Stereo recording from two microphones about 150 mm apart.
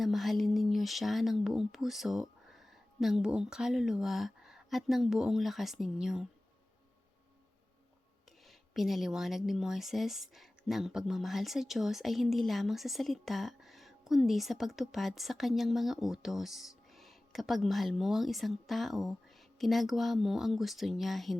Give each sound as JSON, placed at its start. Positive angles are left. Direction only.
{"t": 0.0, "sound": "speech", "side_deg": 0}
{"t": 8.4, "sound": "speech", "side_deg": 0}